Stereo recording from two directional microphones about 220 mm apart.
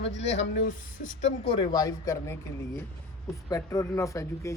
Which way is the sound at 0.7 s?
35° left (ahead or behind).